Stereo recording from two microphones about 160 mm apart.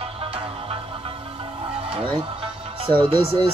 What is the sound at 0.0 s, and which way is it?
Music, 35° right (ahead or behind).